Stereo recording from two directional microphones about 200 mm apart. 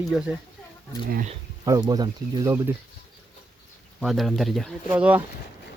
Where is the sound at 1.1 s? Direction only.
45° right (ahead or behind).